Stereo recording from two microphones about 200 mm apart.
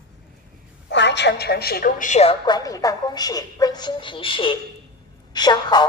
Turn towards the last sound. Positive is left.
turn(degrees=20)  # may be behind; listen again after turning